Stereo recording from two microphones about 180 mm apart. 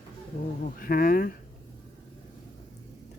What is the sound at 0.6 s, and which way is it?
Speech, 50° left (ahead or behind).